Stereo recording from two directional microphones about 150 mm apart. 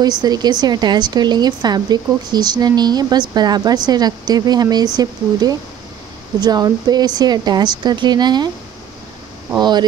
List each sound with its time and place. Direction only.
0.0 s a woman's voice: 25° right (ahead or behind)
9.6 s a woman's voice: 30° right (ahead or behind)